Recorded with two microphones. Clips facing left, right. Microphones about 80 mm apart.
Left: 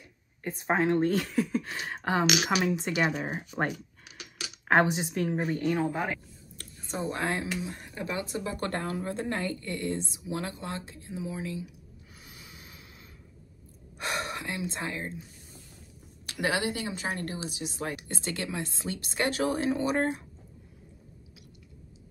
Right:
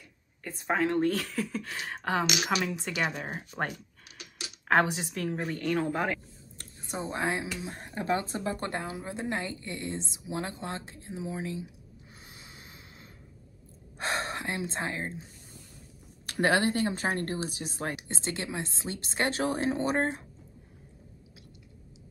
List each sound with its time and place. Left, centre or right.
0.4 s speech: centre
5.1 s speech: centre
5.8 s speech: centre
6.6 s speech: right
8.6 s speech: centre; by 11.7 s right
12.3 s a sound: right
13.9 s speech: right
16.3 s speech: right
17.9 s speech: right